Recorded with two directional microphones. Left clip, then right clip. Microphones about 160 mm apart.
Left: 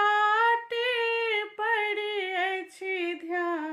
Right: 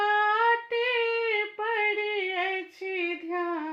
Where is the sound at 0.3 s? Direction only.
40° left (ahead or behind).